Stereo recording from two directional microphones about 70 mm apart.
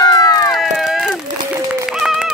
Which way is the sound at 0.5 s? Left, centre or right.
Centre.